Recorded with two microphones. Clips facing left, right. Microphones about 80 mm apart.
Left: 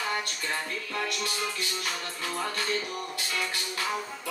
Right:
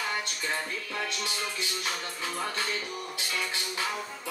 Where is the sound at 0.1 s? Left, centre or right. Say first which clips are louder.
Left 1 dB; centre.